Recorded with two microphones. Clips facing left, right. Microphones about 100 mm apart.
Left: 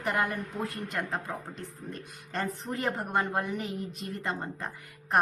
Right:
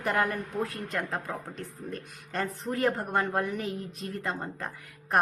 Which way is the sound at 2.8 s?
Centre (ahead or behind).